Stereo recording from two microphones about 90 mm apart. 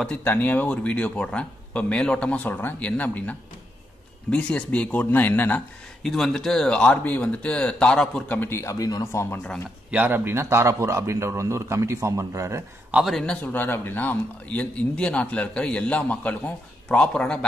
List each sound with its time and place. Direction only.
0.0 s speech: 15° left (ahead or behind)
6.0 s speech: 5° left (ahead or behind)
8.4 s speech: 30° left (ahead or behind)
9.8 s a man's voice: 20° right (ahead or behind)
12.9 s a man's voice: centre (ahead or behind)
13.2 s speech: 10° left (ahead or behind)